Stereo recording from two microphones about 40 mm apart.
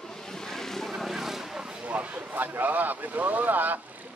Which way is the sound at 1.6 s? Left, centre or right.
Right.